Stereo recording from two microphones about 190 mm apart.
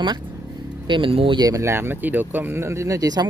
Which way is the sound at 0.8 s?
25° right (ahead or behind).